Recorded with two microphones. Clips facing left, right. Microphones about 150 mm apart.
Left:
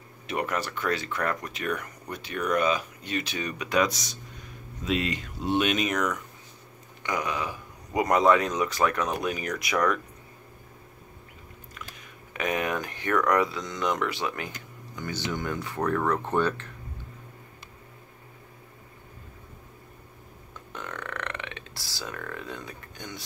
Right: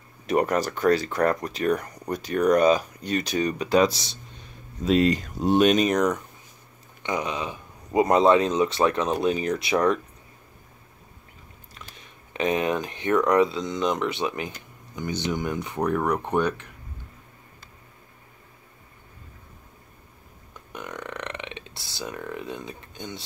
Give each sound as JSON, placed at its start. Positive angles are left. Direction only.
{"t": 0.3, "sound": "speech", "side_deg": -40}
{"t": 7.0, "sound": "speech", "side_deg": -25}
{"t": 11.7, "sound": "speech", "side_deg": -30}
{"t": 20.7, "sound": "burping", "side_deg": -15}